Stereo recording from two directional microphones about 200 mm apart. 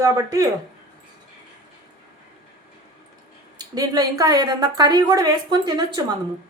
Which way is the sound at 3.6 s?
20° right (ahead or behind).